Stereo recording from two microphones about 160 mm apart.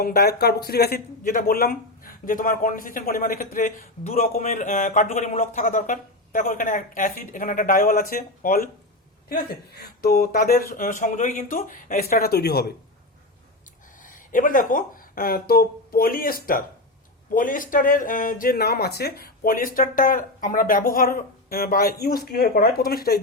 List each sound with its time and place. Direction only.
0.0 s speech: 80° left; by 8.7 s 60° left (ahead or behind)
9.3 s speech: 75° left (ahead or behind); by 12.7 s 90° left
14.0 s speech: 55° left (ahead or behind); by 23.2 s 70° left (ahead or behind)